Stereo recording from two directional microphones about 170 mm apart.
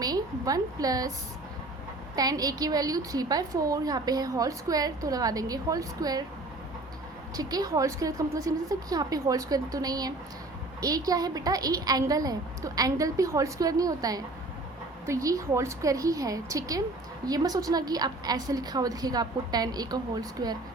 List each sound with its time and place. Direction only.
0.0 s a woman's voice: 20° right (ahead or behind)
2.1 s a woman's voice: 20° right (ahead or behind)
7.3 s a woman's voice: 20° right (ahead or behind)